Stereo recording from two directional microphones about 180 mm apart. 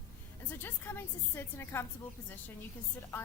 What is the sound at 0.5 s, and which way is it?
A woman's voice, 10° left (ahead or behind).